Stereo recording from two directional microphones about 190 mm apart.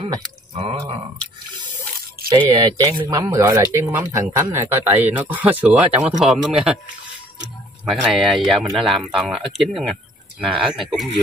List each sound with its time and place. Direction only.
0.0 s speech: 30° right (ahead or behind)
2.3 s speech: 20° right (ahead or behind); by 6.7 s 5° right (ahead or behind)
7.8 s speech: centre (ahead or behind)